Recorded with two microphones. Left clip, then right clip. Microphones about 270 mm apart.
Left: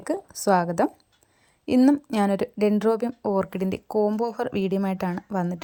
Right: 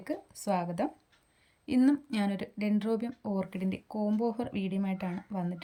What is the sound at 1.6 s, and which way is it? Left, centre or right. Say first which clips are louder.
Speech: left 8 dB; centre.